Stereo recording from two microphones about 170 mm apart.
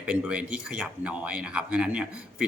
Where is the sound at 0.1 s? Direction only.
5° right (ahead or behind).